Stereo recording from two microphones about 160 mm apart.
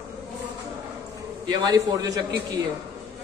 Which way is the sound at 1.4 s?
25° right (ahead or behind).